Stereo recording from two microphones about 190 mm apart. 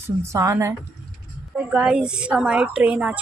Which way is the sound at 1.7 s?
5° right (ahead or behind).